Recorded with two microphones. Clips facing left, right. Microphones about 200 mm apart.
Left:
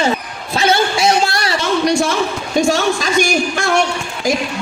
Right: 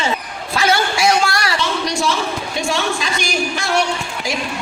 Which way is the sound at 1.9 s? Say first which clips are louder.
Left 4 dB; 50° left (ahead or behind).